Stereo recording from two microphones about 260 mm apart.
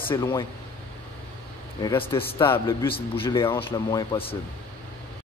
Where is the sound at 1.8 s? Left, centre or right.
Left.